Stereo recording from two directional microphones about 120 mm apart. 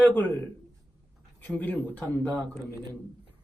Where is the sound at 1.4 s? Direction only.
15° left (ahead or behind).